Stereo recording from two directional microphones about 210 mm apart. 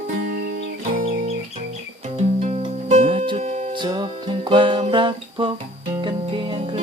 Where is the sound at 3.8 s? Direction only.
20° right (ahead or behind).